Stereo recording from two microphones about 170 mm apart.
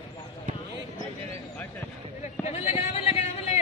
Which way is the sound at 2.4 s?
40° left (ahead or behind).